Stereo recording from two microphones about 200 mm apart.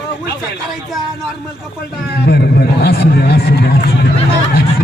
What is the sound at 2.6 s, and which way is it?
A man's voice, 55° left (ahead or behind).